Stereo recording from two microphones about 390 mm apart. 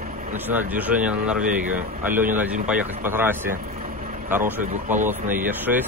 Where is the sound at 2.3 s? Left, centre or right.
Centre.